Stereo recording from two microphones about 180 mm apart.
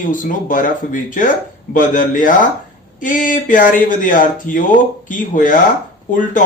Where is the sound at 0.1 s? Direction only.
50° left (ahead or behind).